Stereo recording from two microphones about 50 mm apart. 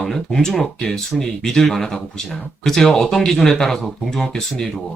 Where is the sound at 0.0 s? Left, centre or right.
Centre.